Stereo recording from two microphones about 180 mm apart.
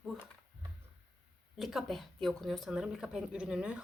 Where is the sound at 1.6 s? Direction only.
Centre (ahead or behind).